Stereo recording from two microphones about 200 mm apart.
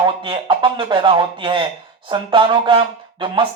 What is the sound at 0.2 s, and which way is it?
Speech, 25° right (ahead or behind).